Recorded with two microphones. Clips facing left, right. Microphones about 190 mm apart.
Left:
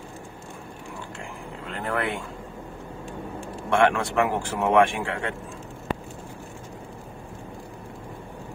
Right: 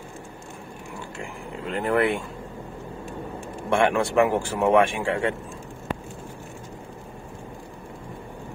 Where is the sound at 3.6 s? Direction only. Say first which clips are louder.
Even; 10° right (ahead or behind).